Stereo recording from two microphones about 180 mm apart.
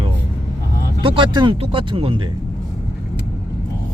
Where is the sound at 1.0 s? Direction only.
25° right (ahead or behind).